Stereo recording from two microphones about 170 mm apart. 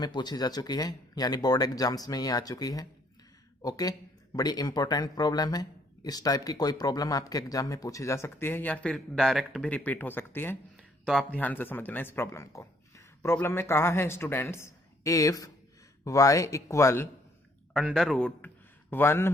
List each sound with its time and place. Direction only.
0.0 s a man's voice: 25° left (ahead or behind)
11.0 s a man's voice: centre (ahead or behind)
17.7 s a man's voice: centre (ahead or behind)